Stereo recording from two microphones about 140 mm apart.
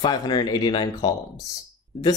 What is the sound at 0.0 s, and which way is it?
Speech, 30° left (ahead or behind).